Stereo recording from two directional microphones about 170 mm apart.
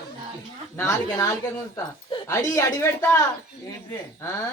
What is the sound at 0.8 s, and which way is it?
A man's voice, 15° left (ahead or behind).